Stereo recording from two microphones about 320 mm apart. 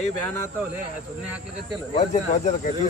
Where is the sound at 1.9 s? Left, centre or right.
Left.